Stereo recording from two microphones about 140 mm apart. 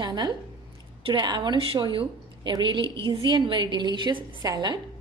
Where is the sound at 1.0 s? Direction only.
30° right (ahead or behind).